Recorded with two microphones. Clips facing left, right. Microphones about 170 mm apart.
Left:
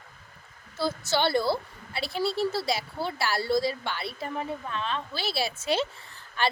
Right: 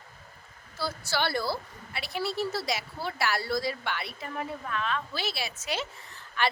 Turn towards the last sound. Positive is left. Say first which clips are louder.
# left 1 dB
turn(degrees=30)  # may be behind; listen again after turning